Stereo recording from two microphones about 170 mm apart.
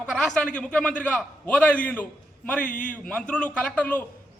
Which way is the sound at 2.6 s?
50° left (ahead or behind).